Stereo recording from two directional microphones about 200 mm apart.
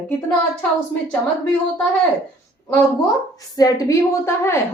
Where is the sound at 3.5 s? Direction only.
15° left (ahead or behind).